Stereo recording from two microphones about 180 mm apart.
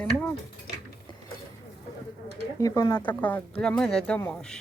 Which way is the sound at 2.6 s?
20° left (ahead or behind).